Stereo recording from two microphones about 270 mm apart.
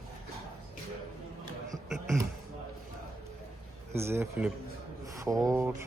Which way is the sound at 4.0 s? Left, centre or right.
Centre.